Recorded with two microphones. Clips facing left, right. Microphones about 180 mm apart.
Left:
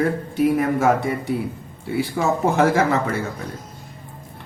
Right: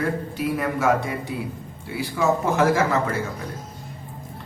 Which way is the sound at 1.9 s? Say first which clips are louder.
Left 1 dB; 55° left (ahead or behind).